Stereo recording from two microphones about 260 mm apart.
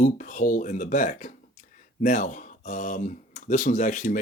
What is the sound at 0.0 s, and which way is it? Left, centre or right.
Speech, left.